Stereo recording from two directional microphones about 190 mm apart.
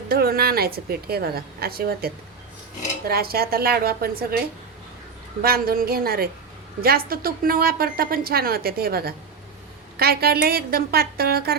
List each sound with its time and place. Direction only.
0.1 s a woman's voice: 55° right (ahead or behind)
5.4 s a woman's voice: 50° right (ahead or behind)